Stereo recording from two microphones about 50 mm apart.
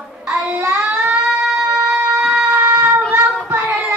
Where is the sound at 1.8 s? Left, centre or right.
Right.